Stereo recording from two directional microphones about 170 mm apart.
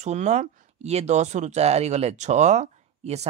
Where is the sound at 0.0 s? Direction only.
45° right (ahead or behind).